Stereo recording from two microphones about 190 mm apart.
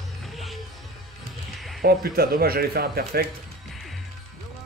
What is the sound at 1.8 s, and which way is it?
A man's voice, 55° right (ahead or behind).